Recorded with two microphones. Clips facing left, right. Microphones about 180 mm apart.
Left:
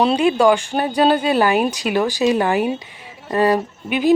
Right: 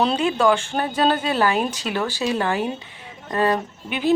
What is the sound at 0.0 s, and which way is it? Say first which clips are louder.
Speech: left 4 dB; 10° left (ahead or behind).